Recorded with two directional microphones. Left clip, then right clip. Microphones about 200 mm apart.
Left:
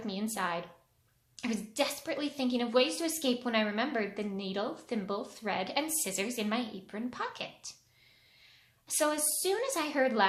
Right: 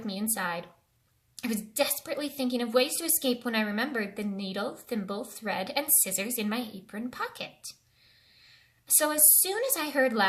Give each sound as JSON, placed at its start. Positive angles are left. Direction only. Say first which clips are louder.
{"t": 0.0, "sound": "a sound", "louder": "right 2 dB", "side_deg": -20}
{"t": 1.4, "sound": "a woman's voice", "louder": "right 3 dB", "side_deg": -20}
{"t": 9.0, "sound": "a woman's voice", "louder": "right 3 dB", "side_deg": -20}